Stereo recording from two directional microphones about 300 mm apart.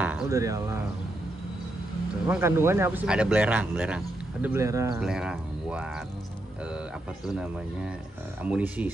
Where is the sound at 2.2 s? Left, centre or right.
Centre.